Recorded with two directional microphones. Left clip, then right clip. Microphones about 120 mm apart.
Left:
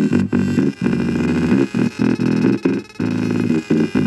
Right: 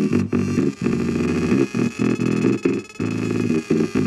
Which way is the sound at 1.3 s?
60° right (ahead or behind).